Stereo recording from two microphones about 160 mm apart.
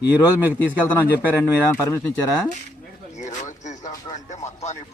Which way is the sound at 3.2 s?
50° left (ahead or behind).